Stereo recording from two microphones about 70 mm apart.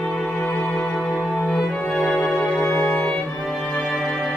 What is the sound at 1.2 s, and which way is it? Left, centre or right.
Music, centre.